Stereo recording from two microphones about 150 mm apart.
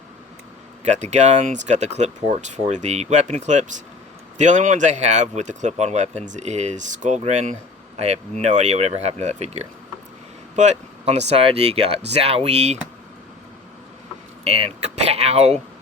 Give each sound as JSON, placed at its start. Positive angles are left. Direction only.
{"t": 0.9, "sound": "speech", "side_deg": -50}
{"t": 14.4, "sound": "speech", "side_deg": -45}